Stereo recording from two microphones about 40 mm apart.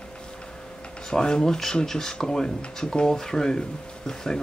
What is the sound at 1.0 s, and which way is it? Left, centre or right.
Speech, centre.